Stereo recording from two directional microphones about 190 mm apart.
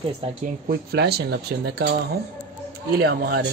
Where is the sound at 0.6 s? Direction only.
55° right (ahead or behind).